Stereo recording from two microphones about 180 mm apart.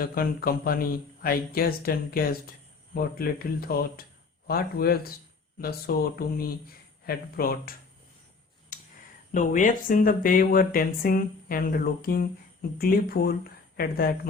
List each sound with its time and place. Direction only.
0.0 s speech: 55° left (ahead or behind)
9.3 s speech: 45° left (ahead or behind)